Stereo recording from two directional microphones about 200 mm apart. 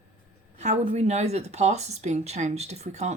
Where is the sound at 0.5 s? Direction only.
35° right (ahead or behind).